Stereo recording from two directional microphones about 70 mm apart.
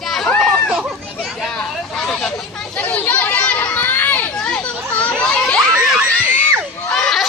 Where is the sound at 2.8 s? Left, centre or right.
Left.